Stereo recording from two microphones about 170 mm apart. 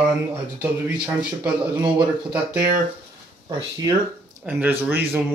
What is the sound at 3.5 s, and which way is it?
Speech, 20° right (ahead or behind).